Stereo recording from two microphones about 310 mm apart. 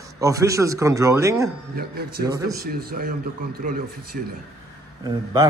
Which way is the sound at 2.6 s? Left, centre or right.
Right.